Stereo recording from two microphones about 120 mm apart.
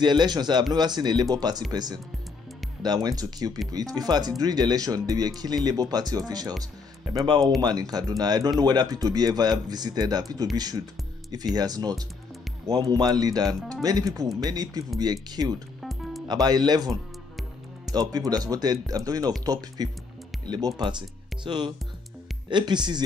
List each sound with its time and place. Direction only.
0.0 s speech: 40° right (ahead or behind)
15.8 s music: centre (ahead or behind)
16.3 s speech: 35° right (ahead or behind)